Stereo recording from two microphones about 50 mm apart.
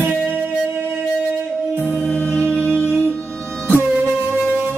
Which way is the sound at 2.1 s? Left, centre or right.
Left.